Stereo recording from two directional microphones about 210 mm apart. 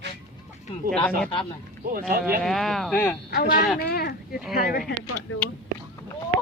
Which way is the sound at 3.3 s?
40° left (ahead or behind).